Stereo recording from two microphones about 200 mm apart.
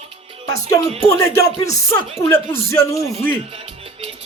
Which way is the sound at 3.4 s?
30° right (ahead or behind).